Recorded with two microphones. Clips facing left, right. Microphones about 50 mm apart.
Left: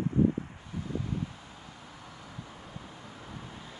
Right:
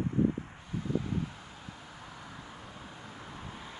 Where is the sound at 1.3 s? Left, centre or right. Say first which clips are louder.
Right 1 dB; centre.